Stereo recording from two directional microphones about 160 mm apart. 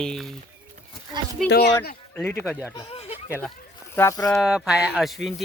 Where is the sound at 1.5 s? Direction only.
90° left.